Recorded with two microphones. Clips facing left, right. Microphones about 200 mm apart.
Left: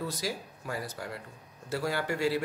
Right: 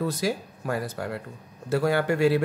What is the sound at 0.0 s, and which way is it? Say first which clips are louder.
A man's voice: right 8 dB; 55° right (ahead or behind).